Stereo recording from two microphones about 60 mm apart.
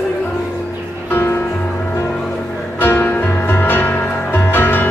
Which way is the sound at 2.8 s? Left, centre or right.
Left.